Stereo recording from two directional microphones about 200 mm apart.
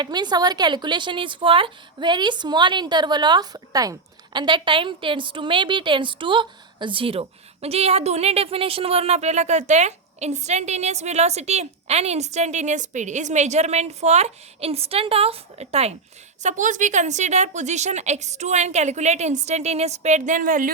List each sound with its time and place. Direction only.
0.0 s a woman's voice: 20° right (ahead or behind); by 20.7 s 45° right (ahead or behind)